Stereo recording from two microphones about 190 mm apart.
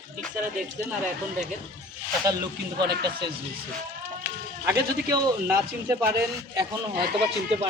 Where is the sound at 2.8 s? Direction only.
60° right (ahead or behind).